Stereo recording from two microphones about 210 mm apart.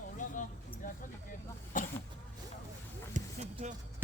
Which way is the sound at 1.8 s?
40° left (ahead or behind).